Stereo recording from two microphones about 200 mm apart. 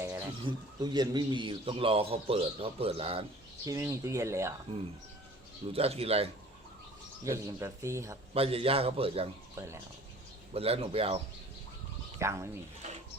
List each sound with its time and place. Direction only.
0.0 s a sound: 15° right (ahead or behind)
0.4 s a man's voice: 20° right (ahead or behind)
3.7 s speech: 15° right (ahead or behind)
5.7 s a man's voice: 30° right (ahead or behind)
7.3 s speech: 15° right (ahead or behind)
8.3 s a man's voice: 30° right (ahead or behind)
9.6 s speech: 15° right (ahead or behind)
10.5 s a man's voice: 30° right (ahead or behind)
12.2 s speech: 15° right (ahead or behind)